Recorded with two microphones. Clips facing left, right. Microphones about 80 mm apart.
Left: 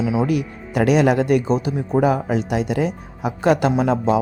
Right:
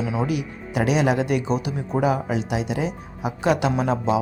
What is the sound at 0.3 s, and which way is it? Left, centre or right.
A man's voice, left.